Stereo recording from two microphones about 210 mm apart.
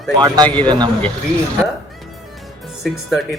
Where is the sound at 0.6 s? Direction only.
20° right (ahead or behind).